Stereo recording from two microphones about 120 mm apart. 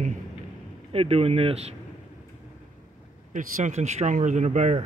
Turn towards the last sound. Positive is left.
turn(degrees=-75)  # may be behind; listen again after turning